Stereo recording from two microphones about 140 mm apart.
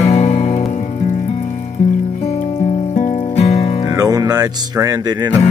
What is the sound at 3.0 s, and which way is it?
Music, 55° left (ahead or behind).